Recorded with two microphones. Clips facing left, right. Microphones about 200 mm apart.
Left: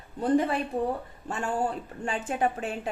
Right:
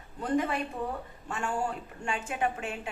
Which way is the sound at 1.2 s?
35° left (ahead or behind).